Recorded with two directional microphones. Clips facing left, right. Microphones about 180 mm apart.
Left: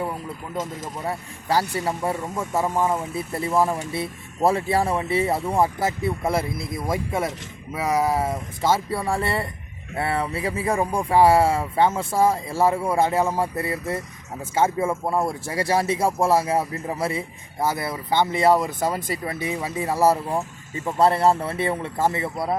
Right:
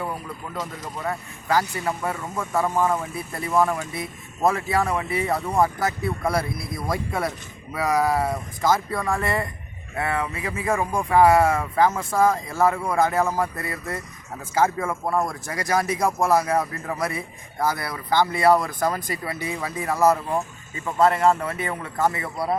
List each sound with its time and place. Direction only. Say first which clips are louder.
1.0 s speech: right 1 dB; 30° left (ahead or behind)
14.8 s speech: left 1 dB; 15° left (ahead or behind)
15.2 s speech: left 3 dB; 30° left (ahead or behind)